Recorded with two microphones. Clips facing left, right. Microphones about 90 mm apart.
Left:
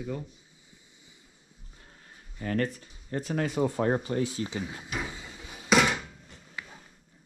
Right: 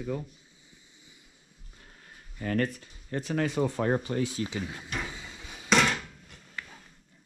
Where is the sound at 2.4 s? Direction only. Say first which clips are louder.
Right 1 dB; 30° left (ahead or behind).